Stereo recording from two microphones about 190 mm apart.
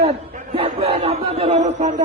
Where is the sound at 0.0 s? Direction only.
30° right (ahead or behind).